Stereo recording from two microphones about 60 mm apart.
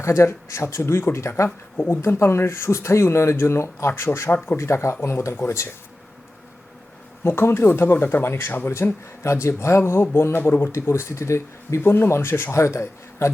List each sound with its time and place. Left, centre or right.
0.0 s speech: left
1.5 s speech: left
1.9 s speech: left
5.3 s speech: left
7.3 s speech: left